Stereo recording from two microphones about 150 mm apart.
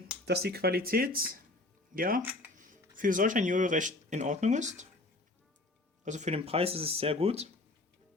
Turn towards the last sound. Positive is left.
turn(degrees=-45)  # may be behind; listen again after turning